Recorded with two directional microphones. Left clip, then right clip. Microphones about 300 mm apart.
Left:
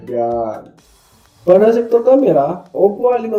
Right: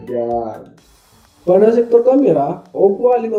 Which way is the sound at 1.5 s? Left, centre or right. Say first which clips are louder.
Right 1 dB; centre.